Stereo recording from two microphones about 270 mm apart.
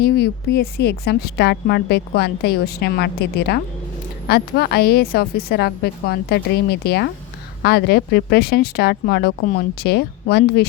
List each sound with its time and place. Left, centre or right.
0.0 s a woman's voice: left